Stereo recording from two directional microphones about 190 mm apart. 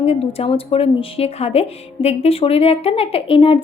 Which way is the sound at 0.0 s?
30° left (ahead or behind).